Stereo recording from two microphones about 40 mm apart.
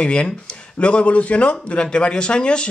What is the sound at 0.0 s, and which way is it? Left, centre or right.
A man's voice, left.